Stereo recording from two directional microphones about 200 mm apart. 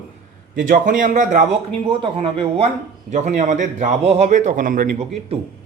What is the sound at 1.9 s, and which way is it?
Speech, 25° right (ahead or behind).